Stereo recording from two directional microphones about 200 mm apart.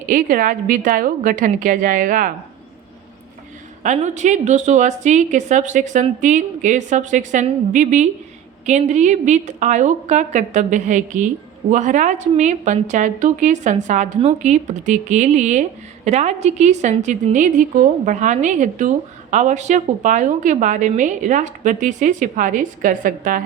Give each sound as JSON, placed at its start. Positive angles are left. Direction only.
{"t": 0.1, "sound": "a woman's voice", "side_deg": -45}
{"t": 3.8, "sound": "a woman's voice", "side_deg": -35}